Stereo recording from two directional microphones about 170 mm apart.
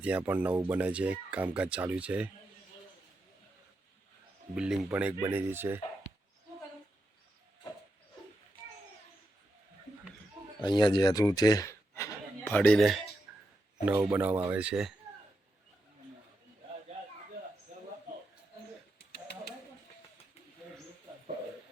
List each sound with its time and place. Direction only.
0.0 s speech: 10° right (ahead or behind)
4.5 s speech: 5° right (ahead or behind)
10.6 s speech: 25° left (ahead or behind); by 13.0 s 5° left (ahead or behind)
13.3 s a sound: 10° right (ahead or behind)
13.9 s speech: 15° right (ahead or behind)